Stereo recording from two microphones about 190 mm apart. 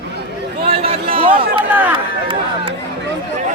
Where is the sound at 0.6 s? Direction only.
30° right (ahead or behind).